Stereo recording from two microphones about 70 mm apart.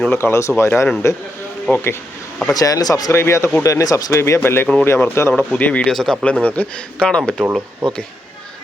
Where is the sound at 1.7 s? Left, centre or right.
Left.